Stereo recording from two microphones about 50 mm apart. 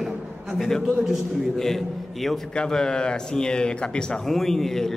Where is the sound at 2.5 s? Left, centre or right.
Centre.